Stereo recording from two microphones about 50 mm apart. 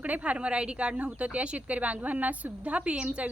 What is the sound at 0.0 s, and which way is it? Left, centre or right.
A woman's voice, right.